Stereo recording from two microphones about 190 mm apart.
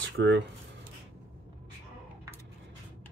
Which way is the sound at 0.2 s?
70° right (ahead or behind).